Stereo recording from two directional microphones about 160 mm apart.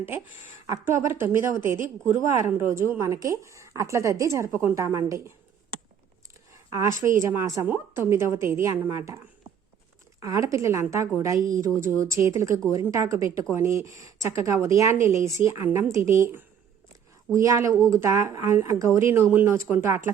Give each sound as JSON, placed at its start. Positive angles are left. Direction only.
{"t": 0.7, "sound": "a woman's voice", "side_deg": -15}
{"t": 6.5, "sound": "a sound", "side_deg": -20}
{"t": 7.3, "sound": "a woman's voice", "side_deg": -20}